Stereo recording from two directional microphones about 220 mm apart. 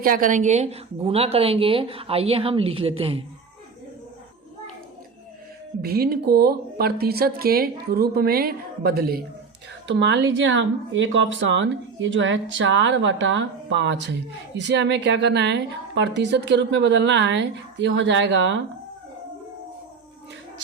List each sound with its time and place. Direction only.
0.0 s a woman's voice: 40° right (ahead or behind)
5.8 s a woman's voice: 45° right (ahead or behind)
9.8 s a woman's voice: 55° right (ahead or behind)